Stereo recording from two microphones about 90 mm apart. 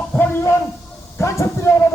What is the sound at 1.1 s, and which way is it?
Speech, 35° left (ahead or behind).